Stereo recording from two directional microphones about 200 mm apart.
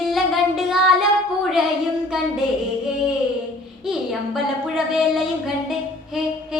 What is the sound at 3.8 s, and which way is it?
Child singing, centre (ahead or behind).